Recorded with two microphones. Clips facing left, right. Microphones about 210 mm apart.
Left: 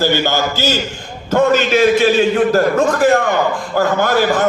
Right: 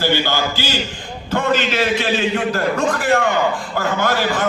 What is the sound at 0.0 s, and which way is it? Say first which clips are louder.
A man's voice: left 3 dB; 45° left (ahead or behind).